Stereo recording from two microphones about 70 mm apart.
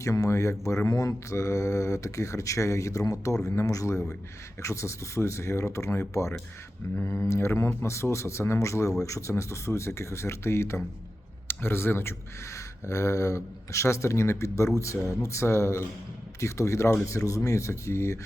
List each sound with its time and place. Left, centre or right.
0.0 s speech: left
12.5 s speech: left